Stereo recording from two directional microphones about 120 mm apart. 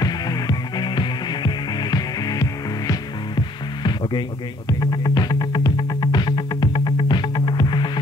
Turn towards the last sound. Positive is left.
turn(degrees=40)  # may be behind; listen again after turning